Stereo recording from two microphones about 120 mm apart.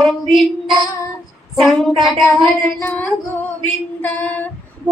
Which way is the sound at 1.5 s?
Centre (ahead or behind).